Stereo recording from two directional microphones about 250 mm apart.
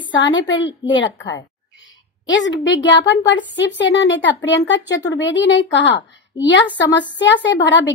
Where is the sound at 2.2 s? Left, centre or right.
Left.